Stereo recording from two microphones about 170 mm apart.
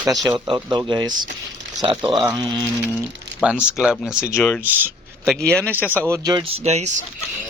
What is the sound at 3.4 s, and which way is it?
Speech, 5° right (ahead or behind).